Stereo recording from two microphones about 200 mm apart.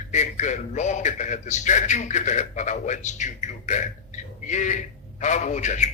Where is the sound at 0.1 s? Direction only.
35° left (ahead or behind).